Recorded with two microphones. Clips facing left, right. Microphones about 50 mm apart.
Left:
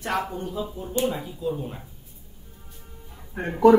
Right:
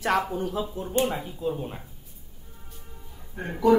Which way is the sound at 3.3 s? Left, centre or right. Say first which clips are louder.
Left 4 dB; left.